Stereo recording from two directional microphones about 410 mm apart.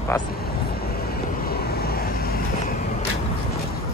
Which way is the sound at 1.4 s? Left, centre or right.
Left.